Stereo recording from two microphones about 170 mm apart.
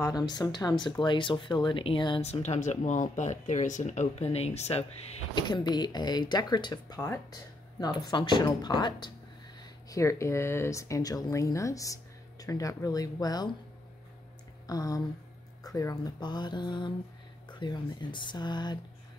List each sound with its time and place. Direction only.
0.0 s speech: 25° left (ahead or behind)
5.3 s speech: 25° left (ahead or behind)
14.7 s speech: 20° left (ahead or behind)